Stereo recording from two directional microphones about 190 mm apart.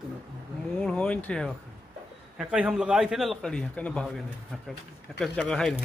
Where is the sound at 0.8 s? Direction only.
5° left (ahead or behind).